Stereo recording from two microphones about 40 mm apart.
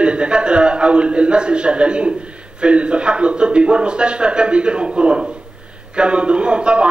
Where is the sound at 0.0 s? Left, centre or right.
Right.